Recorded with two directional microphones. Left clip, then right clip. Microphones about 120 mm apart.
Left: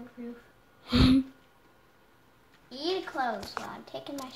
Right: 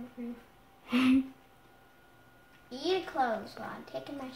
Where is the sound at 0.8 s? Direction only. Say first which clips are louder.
Left 3 dB; 20° left (ahead or behind).